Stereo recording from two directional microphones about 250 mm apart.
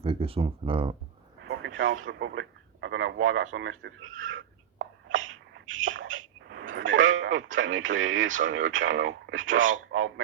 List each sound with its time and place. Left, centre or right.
0.0 s speech: right
1.5 s speech: right
4.8 s rodents: right